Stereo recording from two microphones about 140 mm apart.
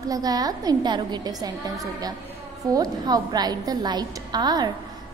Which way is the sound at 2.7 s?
30° right (ahead or behind).